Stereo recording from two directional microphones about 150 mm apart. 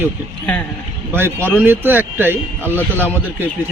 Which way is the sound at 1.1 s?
15° right (ahead or behind).